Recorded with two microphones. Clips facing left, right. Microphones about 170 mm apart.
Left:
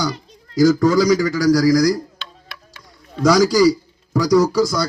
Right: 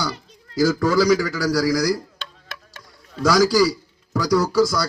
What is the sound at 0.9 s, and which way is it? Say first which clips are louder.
A man's voice: left 2 dB; 5° right (ahead or behind).